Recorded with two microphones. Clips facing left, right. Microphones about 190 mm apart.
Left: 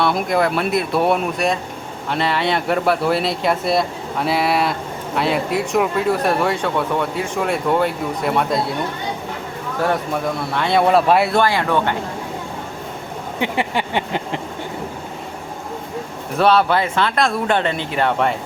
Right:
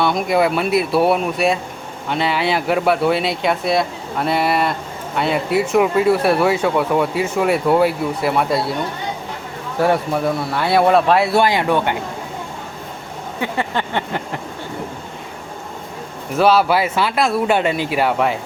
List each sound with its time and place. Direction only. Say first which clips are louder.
0.0 s speech: right 1 dB; centre (ahead or behind)
10.5 s speech: right 1 dB; 5° right (ahead or behind)
11.3 s speech: right 1 dB; 15° right (ahead or behind)
13.4 s a sound: left 1 dB; 15° left (ahead or behind)
16.4 s speech: right 1 dB; 5° right (ahead or behind)